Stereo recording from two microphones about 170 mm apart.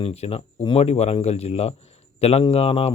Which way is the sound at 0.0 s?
35° left (ahead or behind).